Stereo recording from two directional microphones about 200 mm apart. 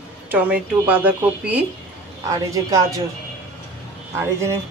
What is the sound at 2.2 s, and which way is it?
Speech, 15° right (ahead or behind).